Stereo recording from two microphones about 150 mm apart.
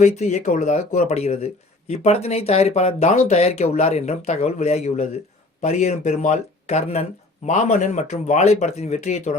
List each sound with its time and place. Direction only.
0.0 s speech: 50° left (ahead or behind)